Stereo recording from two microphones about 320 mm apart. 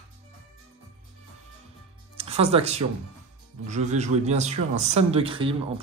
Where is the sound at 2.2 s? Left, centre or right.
Centre.